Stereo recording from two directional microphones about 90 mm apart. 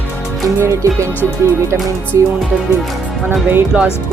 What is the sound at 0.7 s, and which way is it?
Music, 35° right (ahead or behind).